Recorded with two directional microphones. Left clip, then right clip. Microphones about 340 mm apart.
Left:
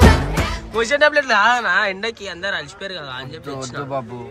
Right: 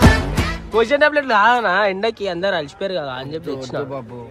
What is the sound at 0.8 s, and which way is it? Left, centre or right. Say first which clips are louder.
Speech: right 1 dB; centre.